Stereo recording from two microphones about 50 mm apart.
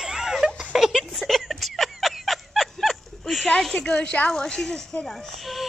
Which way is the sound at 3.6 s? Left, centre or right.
Centre.